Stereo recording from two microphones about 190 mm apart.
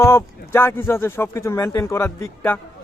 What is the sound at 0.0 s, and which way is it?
Speech, 15° left (ahead or behind).